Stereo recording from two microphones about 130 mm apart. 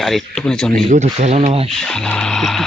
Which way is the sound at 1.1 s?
55° right (ahead or behind).